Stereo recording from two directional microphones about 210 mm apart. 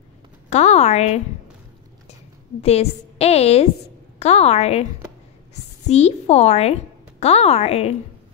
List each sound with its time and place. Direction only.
0.5 s a woman's voice: 30° left (ahead or behind)
2.6 s a woman's voice: 30° left (ahead or behind)